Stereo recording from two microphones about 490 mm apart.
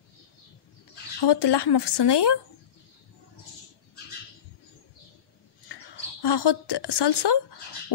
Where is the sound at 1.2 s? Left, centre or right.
Left.